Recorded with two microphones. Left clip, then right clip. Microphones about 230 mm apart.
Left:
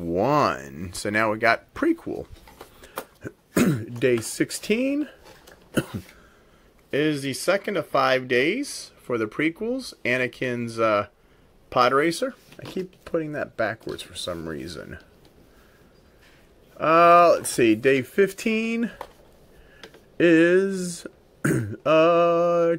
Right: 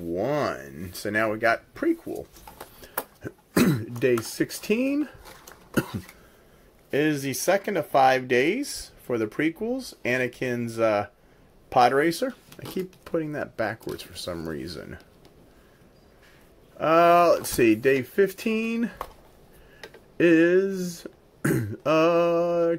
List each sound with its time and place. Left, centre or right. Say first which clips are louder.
0.1 s speech: left 5 dB; left
1.7 s speech: left 2 dB; left
3.2 s speech: even; centre
16.7 s speech: left 3 dB; centre
20.2 s speech: left 2 dB; centre